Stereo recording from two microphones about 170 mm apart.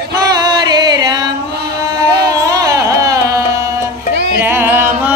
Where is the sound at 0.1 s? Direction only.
25° right (ahead or behind).